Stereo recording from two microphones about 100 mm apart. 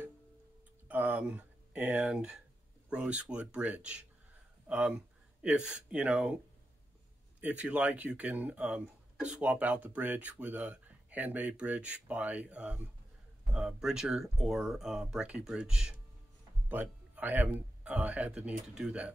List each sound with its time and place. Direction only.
0.8 s speech: 15° right (ahead or behind)
16.6 s speech: 20° right (ahead or behind)